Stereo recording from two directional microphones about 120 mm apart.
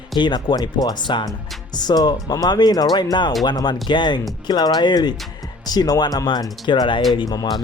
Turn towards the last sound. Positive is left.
turn(degrees=35)  # may be behind; listen again after turning